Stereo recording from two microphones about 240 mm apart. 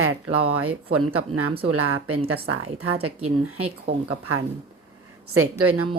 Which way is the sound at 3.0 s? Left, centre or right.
Right.